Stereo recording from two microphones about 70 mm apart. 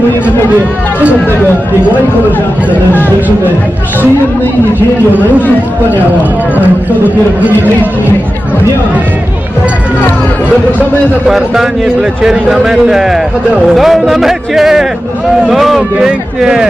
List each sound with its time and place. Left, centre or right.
7.4 s speech: right
11.2 s a man's voice: centre